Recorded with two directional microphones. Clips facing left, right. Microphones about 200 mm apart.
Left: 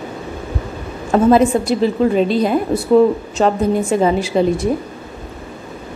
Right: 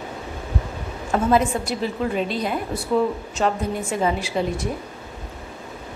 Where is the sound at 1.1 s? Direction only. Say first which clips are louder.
Left 8 dB; 30° left (ahead or behind).